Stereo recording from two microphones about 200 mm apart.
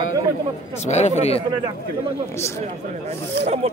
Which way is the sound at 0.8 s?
35° left (ahead or behind).